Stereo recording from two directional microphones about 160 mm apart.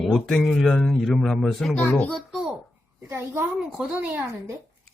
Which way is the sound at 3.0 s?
15° right (ahead or behind).